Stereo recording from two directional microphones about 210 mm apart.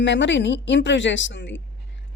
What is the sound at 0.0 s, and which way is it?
A woman's voice, 60° left (ahead or behind).